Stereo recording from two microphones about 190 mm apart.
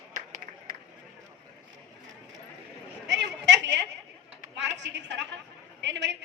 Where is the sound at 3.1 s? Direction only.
70° right (ahead or behind).